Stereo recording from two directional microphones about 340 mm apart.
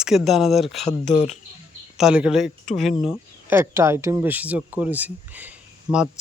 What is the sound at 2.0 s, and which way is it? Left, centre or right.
Speech, centre.